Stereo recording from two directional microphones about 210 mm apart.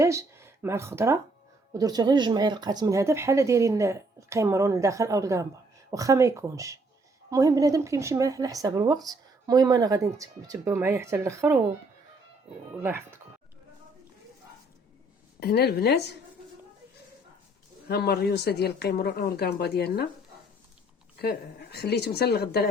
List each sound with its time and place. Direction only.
0.0 s speech: 15° right (ahead or behind)
12.8 s speech: 10° right (ahead or behind)
15.4 s speech: 50° left (ahead or behind)
17.8 s speech: 50° left (ahead or behind)
21.2 s speech: 50° left (ahead or behind)